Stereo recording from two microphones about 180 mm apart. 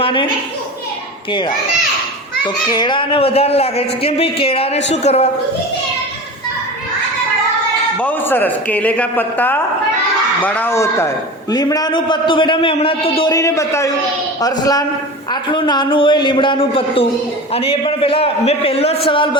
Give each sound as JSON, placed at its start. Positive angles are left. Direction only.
{"t": 0.0, "sound": "a woman's voice", "side_deg": 30}
{"t": 1.3, "sound": "a man's voice", "side_deg": 25}
{"t": 2.6, "sound": "speech", "side_deg": 25}
{"t": 7.9, "sound": "a man's voice", "side_deg": 10}
{"t": 13.3, "sound": "a man's voice", "side_deg": 15}